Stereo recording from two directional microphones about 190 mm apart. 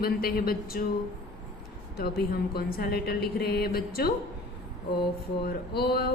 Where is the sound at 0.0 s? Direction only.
50° left (ahead or behind).